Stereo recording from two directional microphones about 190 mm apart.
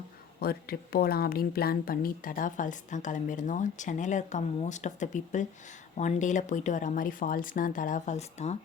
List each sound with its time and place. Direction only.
0.3 s speech: 55° left (ahead or behind); by 8.5 s 35° left (ahead or behind)